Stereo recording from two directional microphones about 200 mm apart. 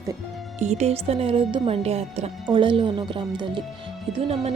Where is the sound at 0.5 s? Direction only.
35° right (ahead or behind).